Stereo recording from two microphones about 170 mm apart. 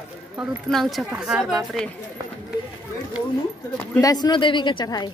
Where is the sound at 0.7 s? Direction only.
Centre (ahead or behind).